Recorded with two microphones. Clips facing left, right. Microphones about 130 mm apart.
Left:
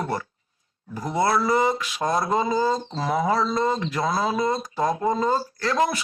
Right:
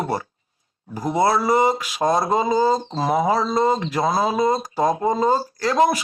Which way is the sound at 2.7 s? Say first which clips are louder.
Right 5 dB; 35° right (ahead or behind).